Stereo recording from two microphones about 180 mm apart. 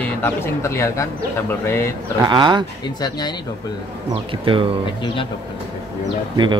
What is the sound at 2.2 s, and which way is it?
Speech, 25° right (ahead or behind).